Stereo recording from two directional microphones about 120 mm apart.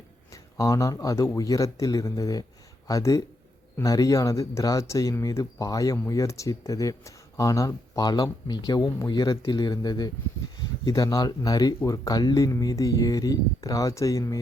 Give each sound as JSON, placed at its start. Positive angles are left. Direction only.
{"t": 0.5, "sound": "speech", "side_deg": 25}